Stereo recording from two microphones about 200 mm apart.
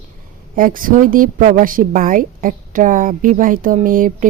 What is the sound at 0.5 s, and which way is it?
A woman's voice, 45° right (ahead or behind).